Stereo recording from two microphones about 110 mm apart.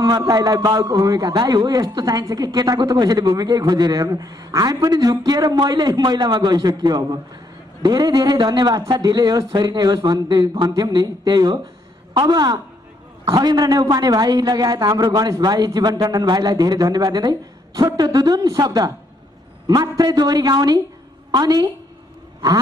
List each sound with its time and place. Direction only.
0.0 s a man's voice: 35° right (ahead or behind)